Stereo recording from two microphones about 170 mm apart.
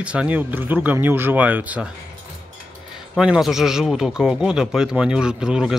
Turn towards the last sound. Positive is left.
turn(degrees=-5)  # may be behind; listen again after turning